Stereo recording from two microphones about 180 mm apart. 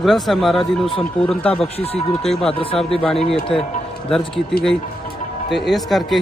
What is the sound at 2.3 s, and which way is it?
A man's voice, 5° left (ahead or behind).